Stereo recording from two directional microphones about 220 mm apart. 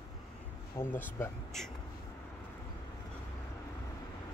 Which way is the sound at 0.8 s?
10° left (ahead or behind).